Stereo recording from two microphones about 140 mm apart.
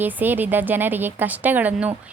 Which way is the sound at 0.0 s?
15° right (ahead or behind).